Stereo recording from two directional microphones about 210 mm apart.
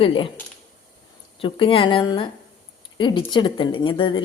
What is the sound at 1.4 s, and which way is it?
A woman's voice, 25° left (ahead or behind).